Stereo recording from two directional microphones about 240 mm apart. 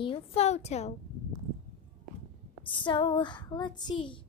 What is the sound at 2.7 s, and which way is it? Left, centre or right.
Speech, centre.